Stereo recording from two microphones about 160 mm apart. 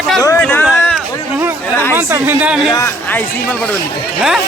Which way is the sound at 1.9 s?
15° right (ahead or behind).